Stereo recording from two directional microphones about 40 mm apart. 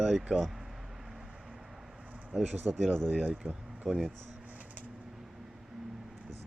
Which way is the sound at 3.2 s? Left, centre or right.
Right.